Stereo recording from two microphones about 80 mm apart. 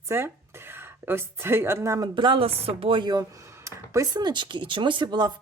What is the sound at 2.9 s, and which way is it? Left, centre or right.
Speech, right.